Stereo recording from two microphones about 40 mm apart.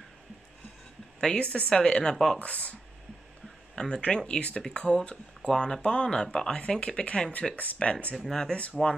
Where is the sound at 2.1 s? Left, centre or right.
Centre.